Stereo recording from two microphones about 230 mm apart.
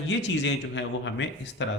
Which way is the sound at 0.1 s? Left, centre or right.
Left.